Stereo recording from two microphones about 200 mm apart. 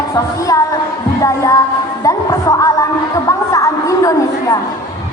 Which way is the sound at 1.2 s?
15° left (ahead or behind).